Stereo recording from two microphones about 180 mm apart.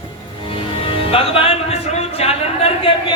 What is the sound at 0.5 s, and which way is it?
Music, 30° left (ahead or behind).